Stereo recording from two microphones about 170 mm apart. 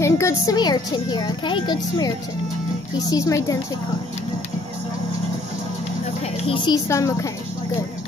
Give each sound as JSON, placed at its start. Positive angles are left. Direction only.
{"t": 0.0, "sound": "a child's voice", "side_deg": 15}
{"t": 6.4, "sound": "a child's voice", "side_deg": 30}